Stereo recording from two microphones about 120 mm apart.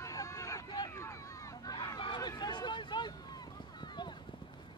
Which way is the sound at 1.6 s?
35° left (ahead or behind).